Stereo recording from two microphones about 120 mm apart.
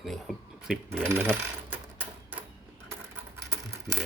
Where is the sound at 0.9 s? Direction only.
15° right (ahead or behind).